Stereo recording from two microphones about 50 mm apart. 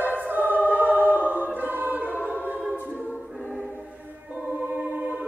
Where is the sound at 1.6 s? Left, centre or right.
Right.